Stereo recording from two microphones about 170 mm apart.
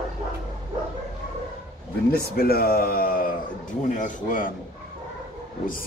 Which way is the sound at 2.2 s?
60° left (ahead or behind).